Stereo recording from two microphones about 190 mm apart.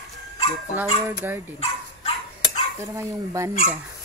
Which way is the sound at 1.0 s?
10° right (ahead or behind).